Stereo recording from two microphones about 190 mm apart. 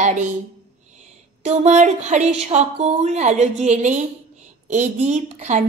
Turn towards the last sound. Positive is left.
turn(degrees=-35)  # may be behind; listen again after turning